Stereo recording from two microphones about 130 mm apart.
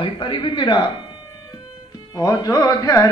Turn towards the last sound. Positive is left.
turn(degrees=25)  # may be behind; listen again after turning